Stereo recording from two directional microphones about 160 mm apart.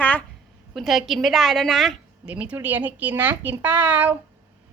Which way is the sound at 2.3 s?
10° right (ahead or behind).